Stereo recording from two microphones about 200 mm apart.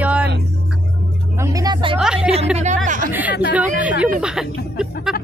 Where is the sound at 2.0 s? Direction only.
5° right (ahead or behind).